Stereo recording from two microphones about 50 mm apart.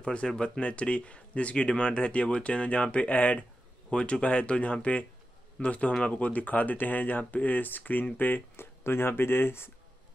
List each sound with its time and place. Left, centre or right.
0.0 s speech: centre; by 8.4 s left
8.5 s speech: left